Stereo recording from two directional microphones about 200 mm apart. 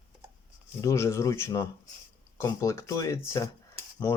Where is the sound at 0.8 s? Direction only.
15° left (ahead or behind).